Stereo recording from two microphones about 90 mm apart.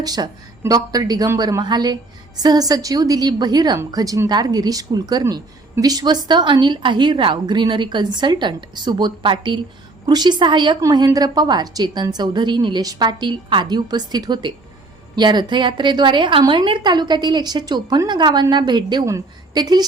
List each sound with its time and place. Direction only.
0.0 s a woman's voice: 45° right (ahead or behind); by 10.8 s 60° right (ahead or behind)
10.9 s a woman's voice: 45° right (ahead or behind)
19.0 s a woman's voice: 40° right (ahead or behind)